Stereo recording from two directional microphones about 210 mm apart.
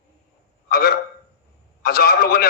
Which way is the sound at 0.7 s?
45° left (ahead or behind).